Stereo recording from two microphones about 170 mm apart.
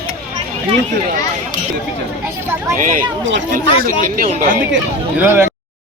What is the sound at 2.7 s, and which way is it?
Speech, 50° right (ahead or behind).